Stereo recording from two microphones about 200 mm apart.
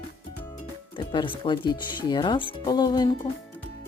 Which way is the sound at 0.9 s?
25° left (ahead or behind).